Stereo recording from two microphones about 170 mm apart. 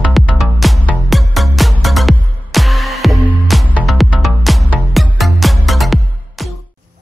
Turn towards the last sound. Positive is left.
turn(degrees=0)  # may be behind; listen again after turning